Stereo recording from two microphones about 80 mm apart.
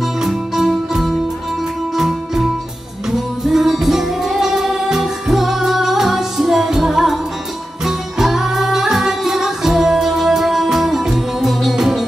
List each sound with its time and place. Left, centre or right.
0.2 s music: centre